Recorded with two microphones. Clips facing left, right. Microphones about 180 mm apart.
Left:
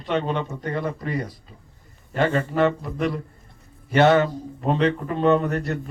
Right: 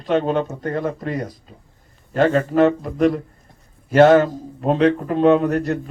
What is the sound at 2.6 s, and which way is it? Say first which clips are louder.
Speech: right 5 dB; 40° right (ahead or behind).